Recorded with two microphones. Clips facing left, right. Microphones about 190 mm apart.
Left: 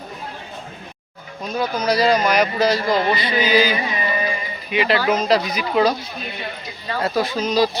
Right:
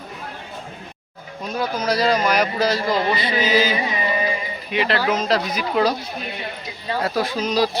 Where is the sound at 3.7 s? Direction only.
20° right (ahead or behind).